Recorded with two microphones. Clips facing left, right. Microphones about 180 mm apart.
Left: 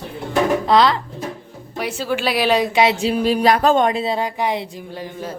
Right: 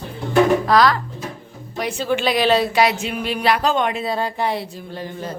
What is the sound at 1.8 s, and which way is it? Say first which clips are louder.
A woman's voice: right 1 dB; 5° left (ahead or behind).